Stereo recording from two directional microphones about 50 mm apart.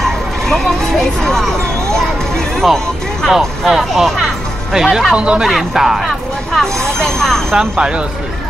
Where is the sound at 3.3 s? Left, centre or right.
Centre.